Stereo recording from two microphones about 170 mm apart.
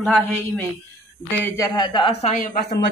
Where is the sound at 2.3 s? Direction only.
55° left (ahead or behind).